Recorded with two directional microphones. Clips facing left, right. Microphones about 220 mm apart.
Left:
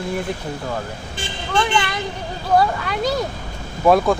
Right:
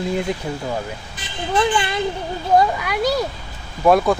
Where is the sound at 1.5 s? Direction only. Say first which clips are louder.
Right 1 dB; 25° right (ahead or behind).